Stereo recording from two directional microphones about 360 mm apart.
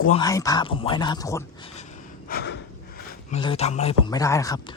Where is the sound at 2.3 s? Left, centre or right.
Left.